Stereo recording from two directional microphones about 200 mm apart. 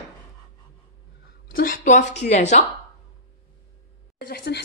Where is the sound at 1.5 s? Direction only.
45° left (ahead or behind).